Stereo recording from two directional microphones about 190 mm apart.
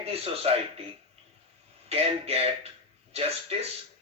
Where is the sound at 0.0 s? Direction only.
30° right (ahead or behind).